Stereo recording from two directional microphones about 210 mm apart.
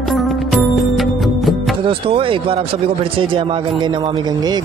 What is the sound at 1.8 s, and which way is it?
Speech, 25° right (ahead or behind).